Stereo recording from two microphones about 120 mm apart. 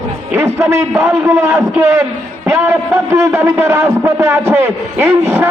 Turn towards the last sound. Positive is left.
turn(degrees=-20)  # may be behind; listen again after turning